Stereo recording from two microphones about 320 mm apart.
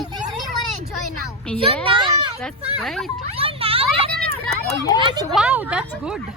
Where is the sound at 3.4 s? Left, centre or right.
Centre.